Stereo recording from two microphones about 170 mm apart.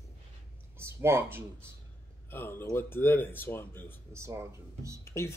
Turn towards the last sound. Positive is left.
turn(degrees=-15)  # may be behind; listen again after turning